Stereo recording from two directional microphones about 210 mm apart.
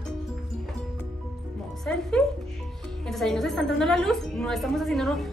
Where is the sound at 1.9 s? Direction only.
5° left (ahead or behind).